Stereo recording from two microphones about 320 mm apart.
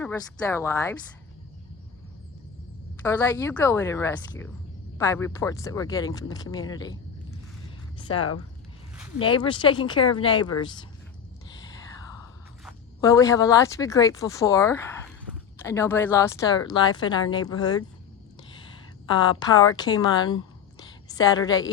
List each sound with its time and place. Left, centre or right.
0.0 s speech: centre
3.1 s speech: centre
7.9 s speech: centre
9.2 s speech: centre
13.0 s speech: centre
19.3 s a woman's voice: centre